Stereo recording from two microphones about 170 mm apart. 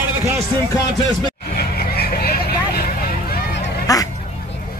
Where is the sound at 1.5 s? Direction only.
65° left (ahead or behind).